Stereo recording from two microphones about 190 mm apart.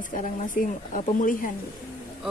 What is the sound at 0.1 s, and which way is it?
A woman's voice, 45° left (ahead or behind).